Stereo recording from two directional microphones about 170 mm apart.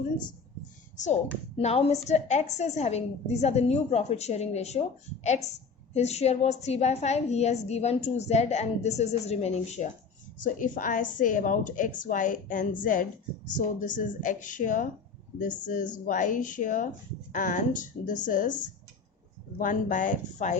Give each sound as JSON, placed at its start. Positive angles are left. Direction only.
{"t": 1.5, "sound": "a woman's voice", "side_deg": 35}
{"t": 5.9, "sound": "a woman's voice", "side_deg": 40}
{"t": 10.4, "sound": "a woman's voice", "side_deg": 50}